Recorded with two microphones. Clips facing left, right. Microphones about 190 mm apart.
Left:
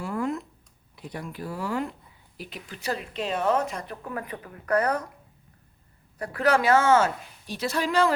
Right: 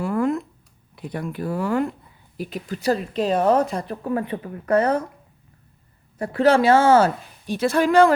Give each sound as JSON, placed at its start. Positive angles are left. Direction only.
{"t": 0.0, "sound": "a sound", "side_deg": -55}
{"t": 0.9, "sound": "speech", "side_deg": -55}
{"t": 2.4, "sound": "speech", "side_deg": -40}
{"t": 6.1, "sound": "speech", "side_deg": -25}
{"t": 7.4, "sound": "speech", "side_deg": -55}